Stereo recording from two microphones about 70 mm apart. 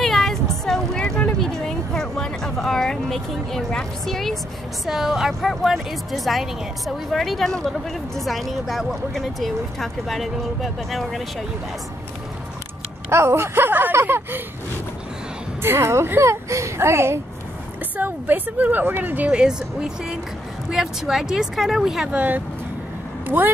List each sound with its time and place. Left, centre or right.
0.0 s a sound: centre
4.8 s speech: centre
13.1 s speech: right
15.6 s speech: right
17.9 s a woman's voice: right
20.7 s speech: centre
22.1 s a woman's voice: right